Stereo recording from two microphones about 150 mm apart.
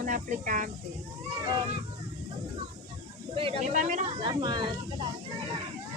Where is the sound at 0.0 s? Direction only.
60° right (ahead or behind).